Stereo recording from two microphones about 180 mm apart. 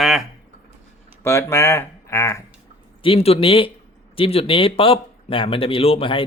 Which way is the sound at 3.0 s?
30° left (ahead or behind).